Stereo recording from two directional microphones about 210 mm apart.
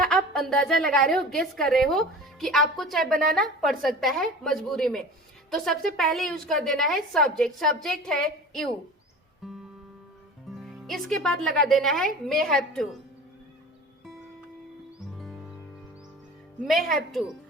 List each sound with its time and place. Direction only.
0.0 s a sound: centre (ahead or behind)
0.9 s a woman's voice: centre (ahead or behind)
3.1 s a woman's voice: 40° right (ahead or behind)
3.3 s a woman's voice: centre (ahead or behind)
10.6 s a woman's voice: centre (ahead or behind)
16.6 s a woman's voice: centre (ahead or behind)